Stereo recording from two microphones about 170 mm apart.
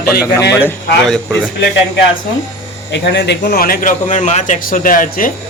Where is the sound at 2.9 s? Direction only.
90° left.